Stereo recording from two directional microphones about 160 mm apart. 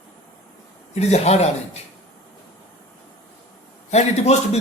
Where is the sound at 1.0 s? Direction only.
45° left (ahead or behind).